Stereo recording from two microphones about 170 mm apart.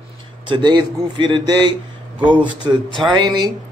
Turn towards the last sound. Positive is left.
turn(degrees=-25)  # may be behind; listen again after turning